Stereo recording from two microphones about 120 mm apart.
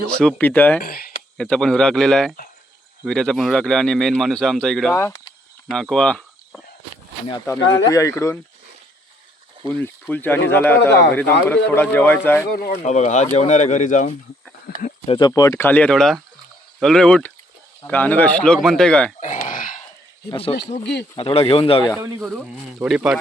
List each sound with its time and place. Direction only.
0.1 s speech: 10° left (ahead or behind)
7.4 s speech: 25° left (ahead or behind)
9.6 s speech: 15° left (ahead or behind)
12.7 s speech: 70° left (ahead or behind); by 14.1 s 90° left
15.3 s speech: 25° left (ahead or behind); by 19.1 s 5° left (ahead or behind)
19.2 s a sound: 90° left
20.3 s speech: 55° left (ahead or behind)
22.0 s speech: 15° right (ahead or behind)
22.9 s speech: 5° right (ahead or behind)